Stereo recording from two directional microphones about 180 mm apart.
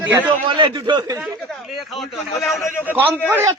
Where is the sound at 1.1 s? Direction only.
Centre (ahead or behind).